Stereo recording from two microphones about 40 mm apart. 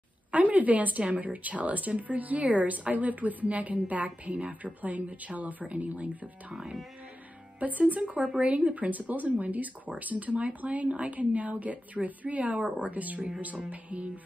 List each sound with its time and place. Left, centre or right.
0.3 s speech: right
6.5 s speech: centre
7.9 s speech: right